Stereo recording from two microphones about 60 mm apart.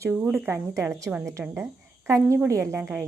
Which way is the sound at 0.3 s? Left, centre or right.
Right.